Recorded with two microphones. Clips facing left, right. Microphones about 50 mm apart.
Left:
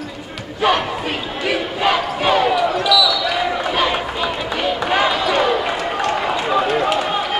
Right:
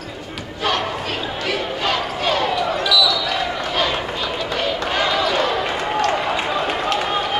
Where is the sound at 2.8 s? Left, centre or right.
Centre.